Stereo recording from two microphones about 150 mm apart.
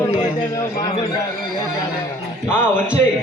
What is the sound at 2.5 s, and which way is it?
Speech, 15° left (ahead or behind).